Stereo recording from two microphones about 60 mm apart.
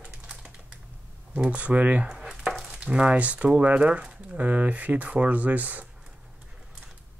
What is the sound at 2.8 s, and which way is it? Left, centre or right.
Speech, right.